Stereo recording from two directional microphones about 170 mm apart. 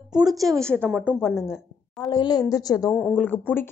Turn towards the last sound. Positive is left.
turn(degrees=10)  # may be behind; listen again after turning